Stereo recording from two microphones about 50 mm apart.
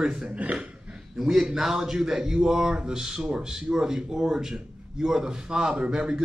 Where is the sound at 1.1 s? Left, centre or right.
Centre.